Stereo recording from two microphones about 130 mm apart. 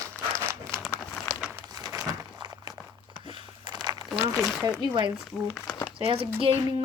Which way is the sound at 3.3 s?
35° right (ahead or behind).